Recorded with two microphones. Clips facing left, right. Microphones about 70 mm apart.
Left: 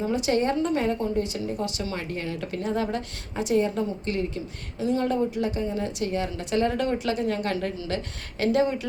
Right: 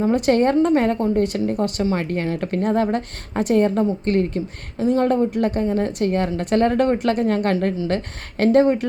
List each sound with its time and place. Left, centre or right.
0.0 s speech: right